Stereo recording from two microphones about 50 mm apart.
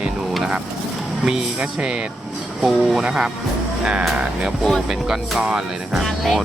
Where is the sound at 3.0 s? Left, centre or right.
Centre.